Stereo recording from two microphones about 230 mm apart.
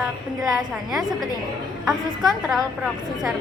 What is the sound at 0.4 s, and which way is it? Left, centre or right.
A woman's voice, centre.